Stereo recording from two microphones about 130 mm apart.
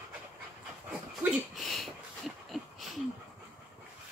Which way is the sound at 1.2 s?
5° right (ahead or behind).